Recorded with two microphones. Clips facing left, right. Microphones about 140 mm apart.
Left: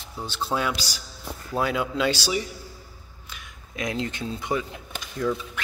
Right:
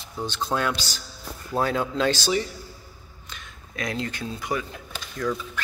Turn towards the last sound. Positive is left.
turn(degrees=20)  # may be behind; listen again after turning